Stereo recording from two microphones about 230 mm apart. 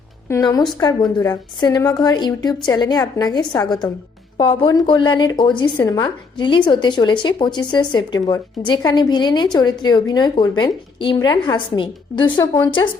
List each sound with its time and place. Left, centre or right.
0.3 s a woman's voice: centre